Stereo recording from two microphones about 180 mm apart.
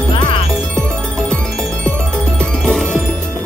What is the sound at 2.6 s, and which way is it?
Music, 5° left (ahead or behind).